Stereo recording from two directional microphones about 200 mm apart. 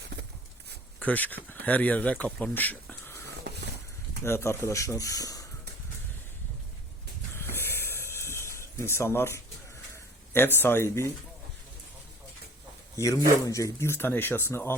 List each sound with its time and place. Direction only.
0.9 s speech: 10° left (ahead or behind)
3.5 s a sound: 55° right (ahead or behind)
4.2 s speech: 15° left (ahead or behind)
7.3 s a sound: 10° left (ahead or behind)
10.3 s speech: 10° left (ahead or behind)
13.0 s speech: 15° left (ahead or behind)